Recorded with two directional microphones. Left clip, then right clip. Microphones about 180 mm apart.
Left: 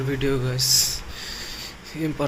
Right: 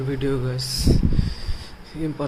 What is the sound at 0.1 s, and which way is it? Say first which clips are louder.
Speech: left 1 dB; 15° right (ahead or behind).